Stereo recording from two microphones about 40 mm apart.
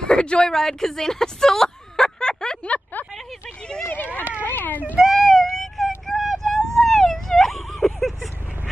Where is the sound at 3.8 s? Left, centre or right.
Left.